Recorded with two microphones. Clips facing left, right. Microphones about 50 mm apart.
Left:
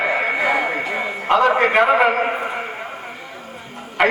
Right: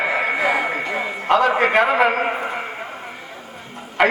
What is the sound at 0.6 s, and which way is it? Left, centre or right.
A man's voice, centre.